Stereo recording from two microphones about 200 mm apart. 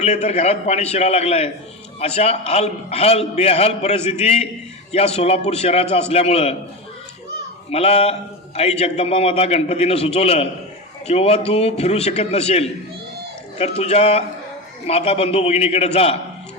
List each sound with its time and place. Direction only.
0.0 s a man's voice: 35° left (ahead or behind)
7.7 s a man's voice: 30° left (ahead or behind)